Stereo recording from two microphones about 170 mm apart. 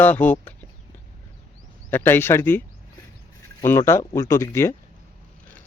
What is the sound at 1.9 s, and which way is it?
Speech, 15° left (ahead or behind).